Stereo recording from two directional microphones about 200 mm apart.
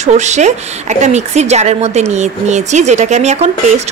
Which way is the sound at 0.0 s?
35° right (ahead or behind).